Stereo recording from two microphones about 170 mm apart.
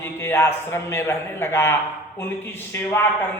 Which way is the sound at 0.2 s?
15° left (ahead or behind).